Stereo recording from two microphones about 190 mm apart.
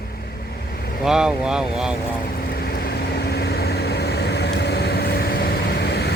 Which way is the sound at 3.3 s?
60° left (ahead or behind).